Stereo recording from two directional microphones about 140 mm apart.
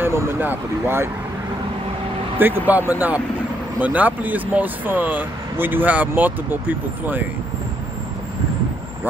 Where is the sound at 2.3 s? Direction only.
15° right (ahead or behind).